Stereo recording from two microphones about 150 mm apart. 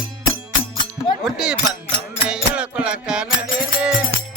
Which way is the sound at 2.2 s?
5° right (ahead or behind).